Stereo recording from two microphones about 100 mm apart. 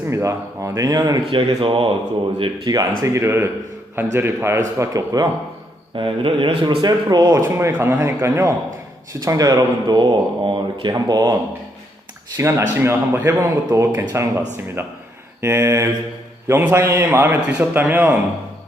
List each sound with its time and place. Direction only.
0.1 s speech: 30° right (ahead or behind)
1.3 s speech: 60° right (ahead or behind)
2.6 s speech: 35° right (ahead or behind)
6.0 s speech: 60° right (ahead or behind)
7.3 s speech: 30° right (ahead or behind); by 10.9 s 55° right (ahead or behind)
10.9 s speech: 40° right (ahead or behind)
12.4 s speech: 25° right (ahead or behind)